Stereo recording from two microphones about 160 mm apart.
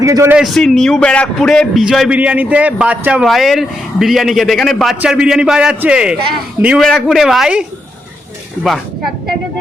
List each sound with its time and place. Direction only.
0.0 s a man's voice: 20° right (ahead or behind)
0.3 s a man's voice: centre (ahead or behind)